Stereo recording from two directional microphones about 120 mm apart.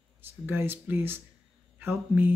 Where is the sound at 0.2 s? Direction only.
20° right (ahead or behind).